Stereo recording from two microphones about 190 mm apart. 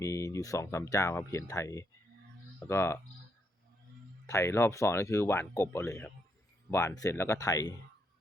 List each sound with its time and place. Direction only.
0.0 s speech: 15° left (ahead or behind)
4.3 s speech: 15° left (ahead or behind)